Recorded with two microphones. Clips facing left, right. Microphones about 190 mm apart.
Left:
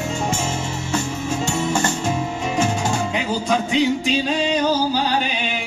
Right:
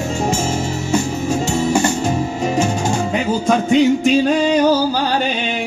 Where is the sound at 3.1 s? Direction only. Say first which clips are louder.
Right 5 dB; 50° right (ahead or behind).